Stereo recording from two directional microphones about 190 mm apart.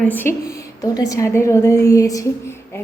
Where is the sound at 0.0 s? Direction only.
10° left (ahead or behind).